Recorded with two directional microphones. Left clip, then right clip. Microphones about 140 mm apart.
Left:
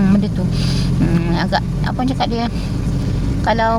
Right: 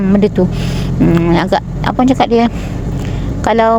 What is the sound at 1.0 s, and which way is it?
Speech, 20° right (ahead or behind).